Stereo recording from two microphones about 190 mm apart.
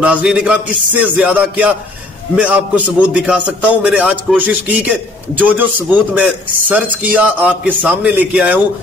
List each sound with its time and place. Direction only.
0.0 s a man's voice: 5° right (ahead or behind)